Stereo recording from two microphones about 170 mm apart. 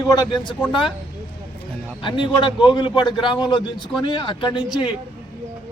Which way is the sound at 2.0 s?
30° left (ahead or behind).